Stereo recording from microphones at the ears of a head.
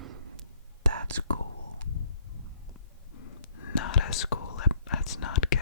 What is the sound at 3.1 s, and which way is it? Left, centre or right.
Whispering, left.